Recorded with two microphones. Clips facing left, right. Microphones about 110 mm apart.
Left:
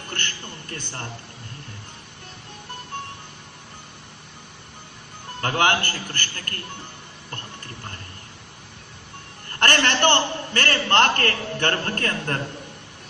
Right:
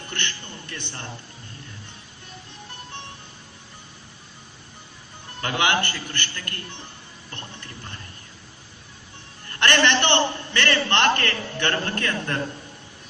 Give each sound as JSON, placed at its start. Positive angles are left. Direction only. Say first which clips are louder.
{"t": 0.1, "sound": "a man's voice", "louder": "even", "side_deg": 40}
{"t": 5.4, "sound": "a man's voice", "louder": "left 2 dB", "side_deg": 40}
{"t": 9.6, "sound": "a man's voice", "louder": "even", "side_deg": 45}